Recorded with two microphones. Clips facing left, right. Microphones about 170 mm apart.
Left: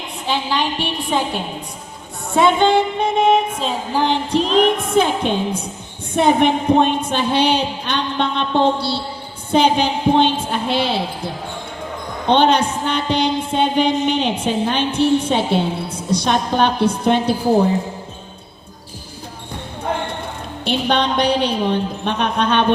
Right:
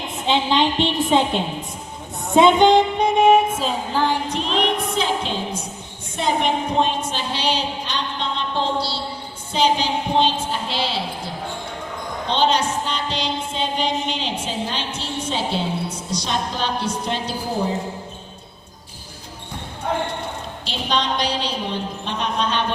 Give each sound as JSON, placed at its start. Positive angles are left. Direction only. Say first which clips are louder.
{"t": 0.3, "sound": "a woman's voice", "louder": "right 2 dB", "side_deg": -20}
{"t": 2.3, "sound": "music", "louder": "right 1 dB", "side_deg": -20}
{"t": 3.9, "sound": "music", "louder": "left 3 dB", "side_deg": 20}
{"t": 4.3, "sound": "music", "louder": "left 7 dB", "side_deg": 35}
{"t": 4.9, "sound": "a woman's voice", "louder": "left 6 dB", "side_deg": 55}
{"t": 12.3, "sound": "a woman's voice", "louder": "left 5 dB", "side_deg": 60}
{"t": 20.7, "sound": "a woman's voice", "louder": "left 6 dB", "side_deg": 60}